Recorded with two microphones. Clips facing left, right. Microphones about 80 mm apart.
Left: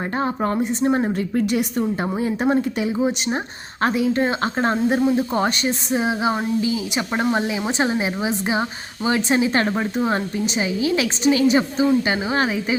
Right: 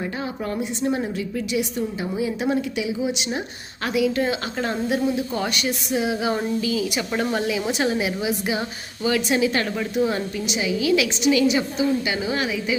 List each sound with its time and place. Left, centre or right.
0.2 s a woman's voice: left